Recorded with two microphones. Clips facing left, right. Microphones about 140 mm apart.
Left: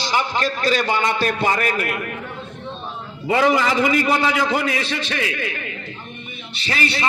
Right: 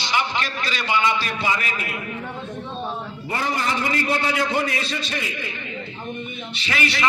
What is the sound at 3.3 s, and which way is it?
A man's voice, 90° left.